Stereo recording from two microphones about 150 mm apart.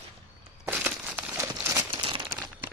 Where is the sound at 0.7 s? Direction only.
10° right (ahead or behind).